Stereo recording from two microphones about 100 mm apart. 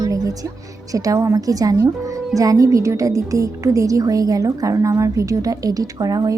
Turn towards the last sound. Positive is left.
turn(degrees=-40)  # may be behind; listen again after turning